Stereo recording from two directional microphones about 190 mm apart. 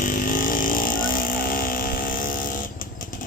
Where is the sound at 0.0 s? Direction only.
50° left (ahead or behind).